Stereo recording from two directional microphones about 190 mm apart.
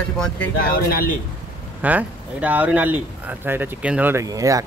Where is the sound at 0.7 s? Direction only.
50° left (ahead or behind).